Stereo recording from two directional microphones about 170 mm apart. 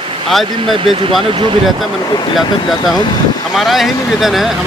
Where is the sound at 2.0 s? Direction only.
25° left (ahead or behind).